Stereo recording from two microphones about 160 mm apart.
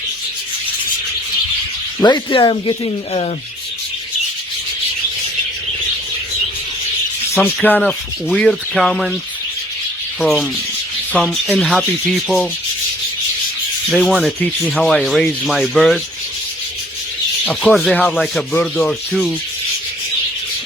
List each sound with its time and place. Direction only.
2.0 s speech: 25° left (ahead or behind)
7.4 s rub: 10° left (ahead or behind)
10.2 s rub: centre (ahead or behind)
13.9 s rub: centre (ahead or behind)
17.4 s rub: centre (ahead or behind)